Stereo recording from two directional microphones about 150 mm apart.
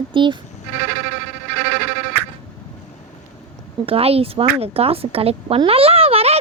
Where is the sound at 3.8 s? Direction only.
40° right (ahead or behind).